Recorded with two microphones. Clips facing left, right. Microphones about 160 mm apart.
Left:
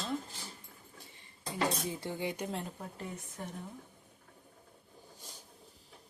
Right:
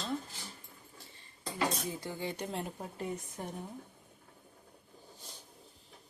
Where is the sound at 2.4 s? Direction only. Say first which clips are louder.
Even; centre (ahead or behind).